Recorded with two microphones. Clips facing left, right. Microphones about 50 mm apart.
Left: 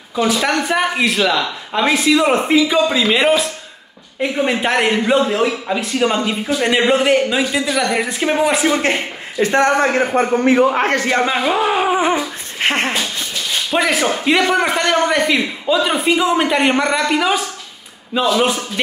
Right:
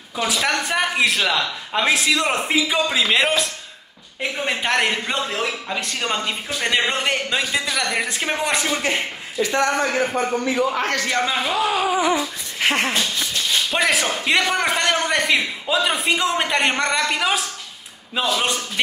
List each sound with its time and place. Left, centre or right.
0.1 s a man's voice: centre
8.6 s speech: left
12.9 s dog: centre
13.7 s a man's voice: centre